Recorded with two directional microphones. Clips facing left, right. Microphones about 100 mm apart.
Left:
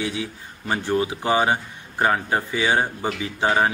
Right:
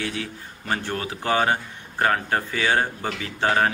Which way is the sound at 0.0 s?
15° left (ahead or behind).